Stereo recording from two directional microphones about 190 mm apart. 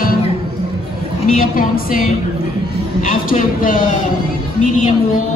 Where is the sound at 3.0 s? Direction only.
45° left (ahead or behind).